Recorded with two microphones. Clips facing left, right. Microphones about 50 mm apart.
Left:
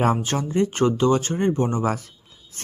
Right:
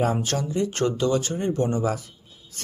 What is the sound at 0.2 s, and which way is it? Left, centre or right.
Speech, left.